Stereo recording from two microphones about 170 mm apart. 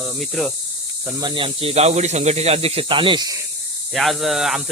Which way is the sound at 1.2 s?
30° right (ahead or behind).